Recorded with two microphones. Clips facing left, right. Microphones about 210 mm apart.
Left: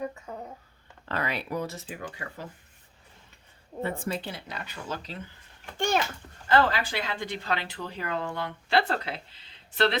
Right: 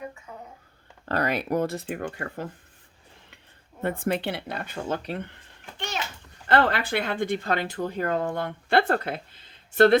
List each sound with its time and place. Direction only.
1.0 s speech: 45° right (ahead or behind)
3.8 s speech: 55° right (ahead or behind)
5.7 s babbling: 50° left (ahead or behind)
6.5 s speech: 60° right (ahead or behind)